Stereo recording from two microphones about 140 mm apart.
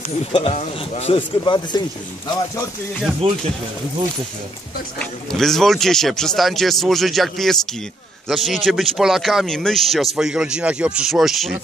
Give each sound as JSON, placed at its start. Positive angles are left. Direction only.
{"t": 0.2, "sound": "speech", "side_deg": 45}
{"t": 1.4, "sound": "speech", "side_deg": 30}
{"t": 3.2, "sound": "speech", "side_deg": -45}
{"t": 4.9, "sound": "speech", "side_deg": 0}